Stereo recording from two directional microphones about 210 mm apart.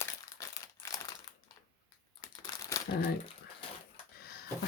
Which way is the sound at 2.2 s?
15° left (ahead or behind).